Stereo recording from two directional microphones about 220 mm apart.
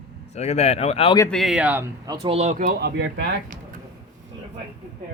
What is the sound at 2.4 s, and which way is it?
Speech, 35° right (ahead or behind).